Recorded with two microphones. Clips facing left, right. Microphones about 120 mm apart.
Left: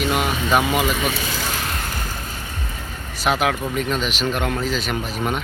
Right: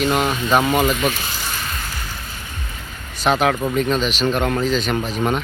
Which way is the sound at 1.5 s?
80° left.